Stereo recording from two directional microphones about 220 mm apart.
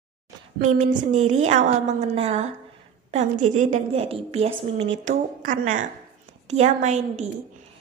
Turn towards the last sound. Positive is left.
turn(degrees=-30)  # may be behind; listen again after turning